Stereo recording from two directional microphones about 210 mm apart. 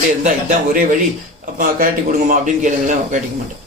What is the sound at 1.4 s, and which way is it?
Speech, 40° right (ahead or behind).